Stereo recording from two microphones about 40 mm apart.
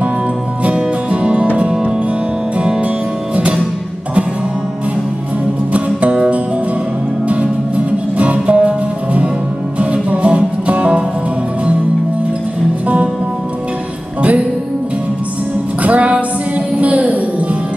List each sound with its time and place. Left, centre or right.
0.7 s music: right
5.7 s music: right
7.2 s music: right
12.8 s music: right
15.8 s music: right